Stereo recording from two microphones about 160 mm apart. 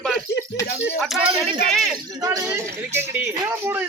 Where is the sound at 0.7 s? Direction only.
90° left.